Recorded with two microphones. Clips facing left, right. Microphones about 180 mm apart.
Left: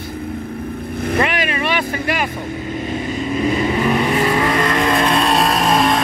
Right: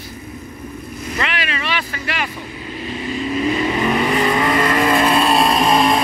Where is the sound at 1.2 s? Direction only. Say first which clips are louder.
Left 4 dB; 50° left (ahead or behind).